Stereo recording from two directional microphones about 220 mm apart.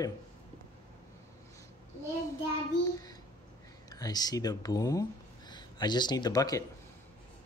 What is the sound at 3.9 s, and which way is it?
Speech, 15° left (ahead or behind).